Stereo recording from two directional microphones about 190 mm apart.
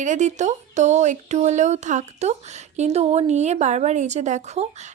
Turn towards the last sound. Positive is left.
turn(degrees=-35)  # may be behind; listen again after turning